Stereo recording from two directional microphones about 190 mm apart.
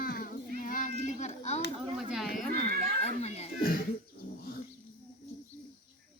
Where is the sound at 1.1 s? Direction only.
40° left (ahead or behind).